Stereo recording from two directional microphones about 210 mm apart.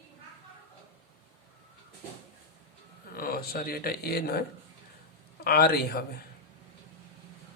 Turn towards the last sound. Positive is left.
turn(degrees=50)  # may be behind; listen again after turning